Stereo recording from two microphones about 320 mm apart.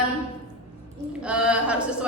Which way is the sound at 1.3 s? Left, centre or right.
Centre.